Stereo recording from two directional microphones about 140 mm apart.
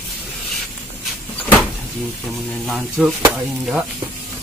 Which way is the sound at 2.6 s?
Centre (ahead or behind).